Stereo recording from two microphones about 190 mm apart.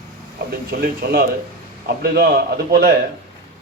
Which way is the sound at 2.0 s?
55° right (ahead or behind).